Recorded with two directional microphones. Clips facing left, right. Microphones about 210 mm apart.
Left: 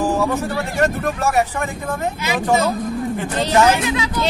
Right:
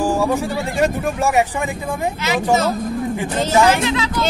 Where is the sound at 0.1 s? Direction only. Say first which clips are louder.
Right 1 dB; 10° right (ahead or behind).